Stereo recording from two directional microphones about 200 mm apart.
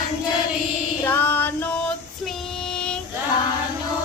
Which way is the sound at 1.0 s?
10° left (ahead or behind).